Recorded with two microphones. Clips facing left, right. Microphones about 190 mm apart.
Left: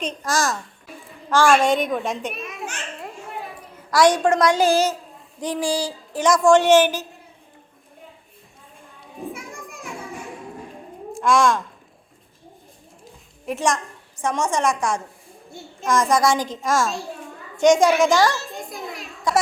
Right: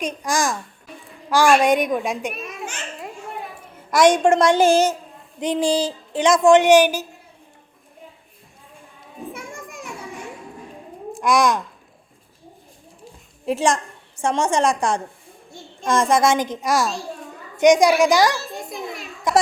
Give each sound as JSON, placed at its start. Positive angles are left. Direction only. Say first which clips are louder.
{"t": 0.0, "sound": "a woman's voice", "louder": "right 1 dB", "side_deg": -10}
{"t": 2.3, "sound": "children playing", "louder": "even", "side_deg": 0}
{"t": 3.8, "sound": "a woman's voice", "louder": "right 2 dB", "side_deg": -20}
{"t": 9.4, "sound": "children playing", "louder": "right 1 dB", "side_deg": 0}
{"t": 11.2, "sound": "a woman's voice", "louder": "even", "side_deg": -15}
{"t": 13.4, "sound": "a woman's voice", "louder": "right 3 dB", "side_deg": -30}
{"t": 18.4, "sound": "children playing", "louder": "right 2 dB", "side_deg": 0}